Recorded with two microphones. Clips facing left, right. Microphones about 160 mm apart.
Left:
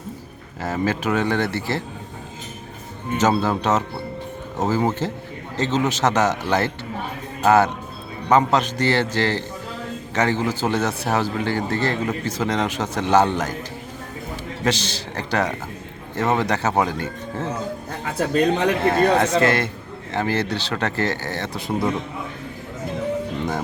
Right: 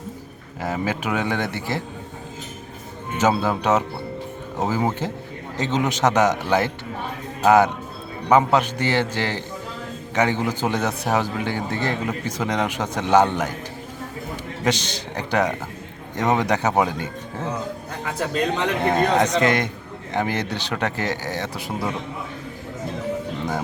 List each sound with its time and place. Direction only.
0.6 s a man's voice: 10° right (ahead or behind)
3.2 s a man's voice: 10° right (ahead or behind)
14.6 s a man's voice: 15° right (ahead or behind)
18.9 s a man's voice: 15° right (ahead or behind)